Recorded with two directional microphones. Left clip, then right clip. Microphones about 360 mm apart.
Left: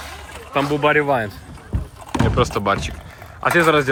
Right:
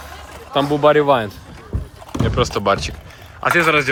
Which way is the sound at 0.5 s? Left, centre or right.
Centre.